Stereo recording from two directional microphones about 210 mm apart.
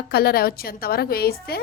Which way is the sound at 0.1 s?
50° left (ahead or behind).